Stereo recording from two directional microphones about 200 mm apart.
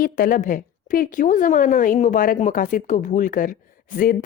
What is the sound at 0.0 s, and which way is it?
A woman's voice, 45° left (ahead or behind).